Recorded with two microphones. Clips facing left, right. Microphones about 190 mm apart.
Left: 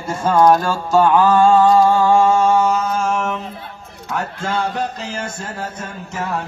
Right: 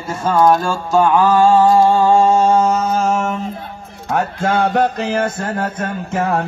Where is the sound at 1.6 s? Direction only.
25° right (ahead or behind).